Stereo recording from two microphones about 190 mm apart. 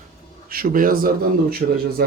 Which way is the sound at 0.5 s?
50° right (ahead or behind).